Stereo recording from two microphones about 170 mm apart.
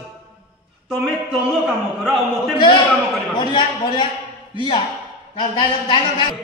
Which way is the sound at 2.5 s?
30° left (ahead or behind).